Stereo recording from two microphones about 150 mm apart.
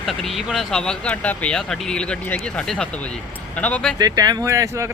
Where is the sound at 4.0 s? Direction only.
25° right (ahead or behind).